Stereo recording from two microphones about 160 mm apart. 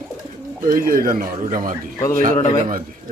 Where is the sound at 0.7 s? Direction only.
65° right (ahead or behind).